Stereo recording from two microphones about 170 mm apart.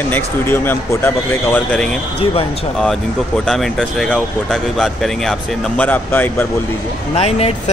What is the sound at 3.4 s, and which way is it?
Speech, centre (ahead or behind).